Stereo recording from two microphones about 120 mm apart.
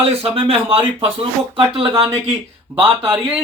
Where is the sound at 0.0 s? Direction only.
50° right (ahead or behind).